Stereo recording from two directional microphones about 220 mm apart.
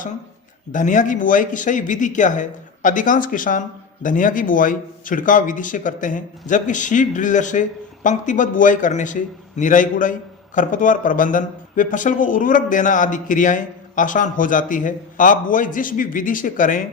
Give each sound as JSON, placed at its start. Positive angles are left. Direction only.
{"t": 0.7, "sound": "speech", "side_deg": 35}